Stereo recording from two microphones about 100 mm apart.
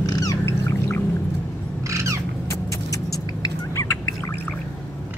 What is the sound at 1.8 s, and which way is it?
Bird, 30° right (ahead or behind).